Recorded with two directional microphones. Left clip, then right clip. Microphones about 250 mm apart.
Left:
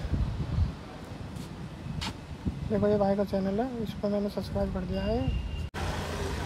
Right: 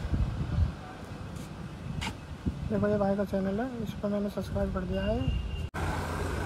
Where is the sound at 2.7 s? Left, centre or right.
Left.